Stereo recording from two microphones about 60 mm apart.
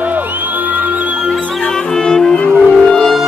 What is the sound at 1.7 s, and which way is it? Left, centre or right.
Music, centre.